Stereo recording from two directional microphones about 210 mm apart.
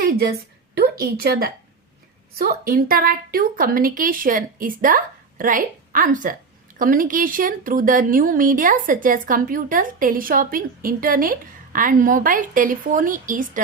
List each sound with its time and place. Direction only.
0.0 s a woman's voice: 45° right (ahead or behind)